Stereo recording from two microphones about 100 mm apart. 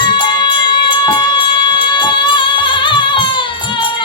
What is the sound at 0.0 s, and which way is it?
Music, 50° left (ahead or behind).